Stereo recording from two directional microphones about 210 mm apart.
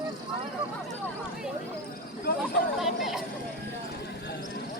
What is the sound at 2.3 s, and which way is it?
Speech, 45° left (ahead or behind).